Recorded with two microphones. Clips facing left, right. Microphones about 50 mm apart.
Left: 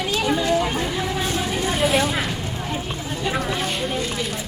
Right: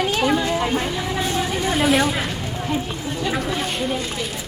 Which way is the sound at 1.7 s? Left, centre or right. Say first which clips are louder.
Right 2 dB; centre.